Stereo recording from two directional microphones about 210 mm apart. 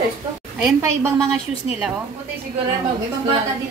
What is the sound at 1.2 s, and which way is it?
Speech, centre (ahead or behind).